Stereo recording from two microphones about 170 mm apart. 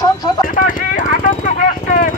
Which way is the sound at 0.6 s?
55° left (ahead or behind).